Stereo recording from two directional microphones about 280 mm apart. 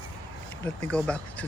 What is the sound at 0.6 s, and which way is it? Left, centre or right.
Speech, centre.